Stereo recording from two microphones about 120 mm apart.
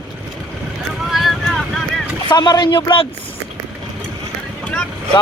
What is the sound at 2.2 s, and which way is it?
Speech, 35° left (ahead or behind).